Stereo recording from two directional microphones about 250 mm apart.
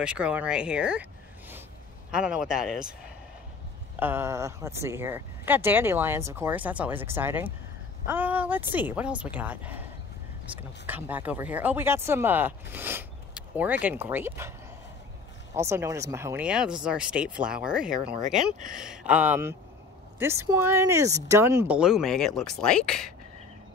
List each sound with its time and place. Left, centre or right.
0.0 s speech: centre
2.0 s speech: centre
4.0 s speech: centre
15.5 s speech: centre
18.3 s speech: right
18.8 s speech: centre